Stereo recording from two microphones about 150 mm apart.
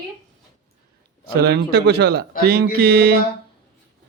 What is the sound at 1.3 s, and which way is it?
Speech, 90° right.